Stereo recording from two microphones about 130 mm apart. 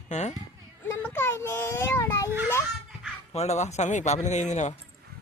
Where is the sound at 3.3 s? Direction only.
60° left (ahead or behind).